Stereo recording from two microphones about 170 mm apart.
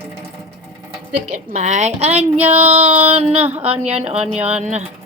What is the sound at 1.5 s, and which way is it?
A woman's voice, 45° right (ahead or behind).